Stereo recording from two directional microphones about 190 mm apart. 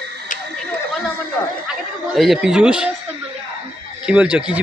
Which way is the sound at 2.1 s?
Centre (ahead or behind).